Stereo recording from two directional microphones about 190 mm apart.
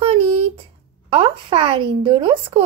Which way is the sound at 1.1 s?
30° right (ahead or behind).